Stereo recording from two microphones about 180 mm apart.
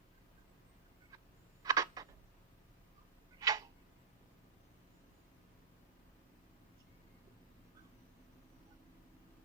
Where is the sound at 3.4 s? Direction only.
20° right (ahead or behind).